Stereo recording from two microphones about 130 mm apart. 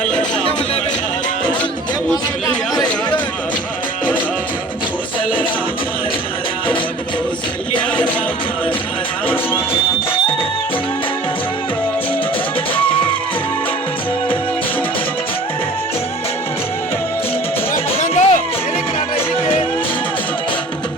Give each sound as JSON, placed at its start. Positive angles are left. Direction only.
{"t": 18.0, "sound": "music", "side_deg": 60}